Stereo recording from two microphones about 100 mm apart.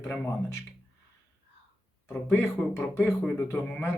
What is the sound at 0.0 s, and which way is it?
Speech, 25° left (ahead or behind).